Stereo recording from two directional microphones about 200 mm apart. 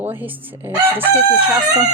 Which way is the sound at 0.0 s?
10° right (ahead or behind).